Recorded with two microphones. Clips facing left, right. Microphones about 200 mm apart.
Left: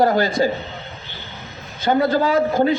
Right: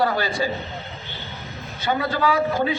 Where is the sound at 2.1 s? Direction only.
45° left (ahead or behind).